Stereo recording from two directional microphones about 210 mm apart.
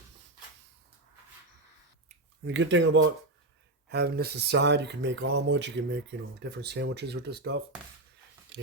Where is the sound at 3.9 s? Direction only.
50° right (ahead or behind).